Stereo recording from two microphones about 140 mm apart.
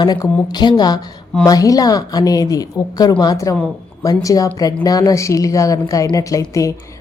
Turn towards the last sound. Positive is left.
turn(degrees=25)  # may be behind; listen again after turning